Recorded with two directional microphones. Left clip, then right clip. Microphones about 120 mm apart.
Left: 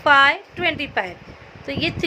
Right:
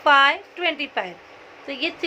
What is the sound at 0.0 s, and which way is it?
A woman's voice, 30° left (ahead or behind).